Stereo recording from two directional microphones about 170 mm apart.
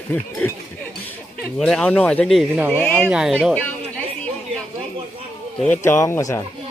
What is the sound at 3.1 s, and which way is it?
Speech, 5° right (ahead or behind).